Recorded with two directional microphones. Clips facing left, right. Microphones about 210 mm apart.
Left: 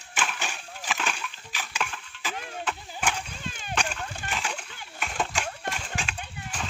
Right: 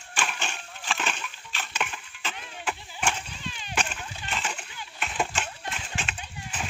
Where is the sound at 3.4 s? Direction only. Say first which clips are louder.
Left 2 dB; 45° left (ahead or behind).